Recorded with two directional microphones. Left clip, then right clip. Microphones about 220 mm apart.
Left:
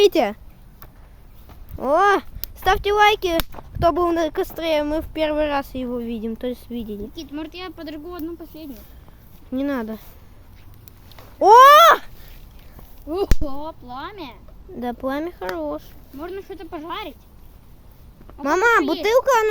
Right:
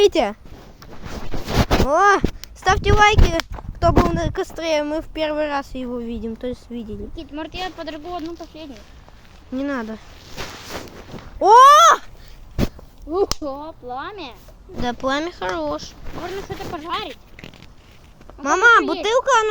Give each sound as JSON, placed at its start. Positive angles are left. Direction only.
{"t": 0.0, "sound": "speech", "side_deg": 0}
{"t": 1.9, "sound": "speech", "side_deg": 0}
{"t": 7.2, "sound": "speech", "side_deg": 50}
{"t": 9.5, "sound": "speech", "side_deg": 5}
{"t": 11.3, "sound": "speech", "side_deg": 5}
{"t": 13.1, "sound": "speech", "side_deg": 50}
{"t": 14.8, "sound": "speech", "side_deg": 0}
{"t": 16.5, "sound": "speech", "side_deg": 50}
{"t": 18.4, "sound": "speech", "side_deg": 5}